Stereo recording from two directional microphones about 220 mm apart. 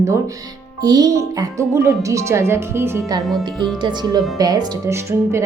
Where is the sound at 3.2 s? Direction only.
Centre (ahead or behind).